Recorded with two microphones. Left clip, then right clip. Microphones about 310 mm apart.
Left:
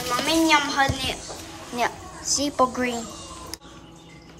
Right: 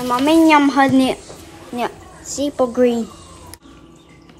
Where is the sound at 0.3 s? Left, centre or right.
Centre.